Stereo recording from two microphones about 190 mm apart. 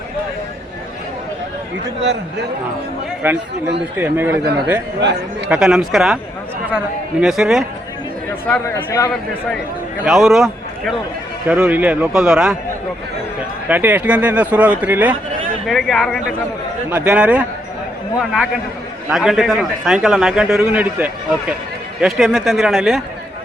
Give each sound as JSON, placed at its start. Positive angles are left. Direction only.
{"t": 2.0, "sound": "a man's voice", "side_deg": -70}
{"t": 3.2, "sound": "speech", "side_deg": -10}
{"t": 5.5, "sound": "a man's voice", "side_deg": -5}
{"t": 8.4, "sound": "speech", "side_deg": 10}
{"t": 10.0, "sound": "a man's voice", "side_deg": 0}
{"t": 13.7, "sound": "speech", "side_deg": -10}
{"t": 15.6, "sound": "a man's voice", "side_deg": 0}
{"t": 16.9, "sound": "a man's voice", "side_deg": -10}